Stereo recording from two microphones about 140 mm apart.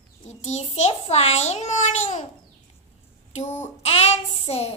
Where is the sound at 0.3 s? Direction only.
55° left (ahead or behind).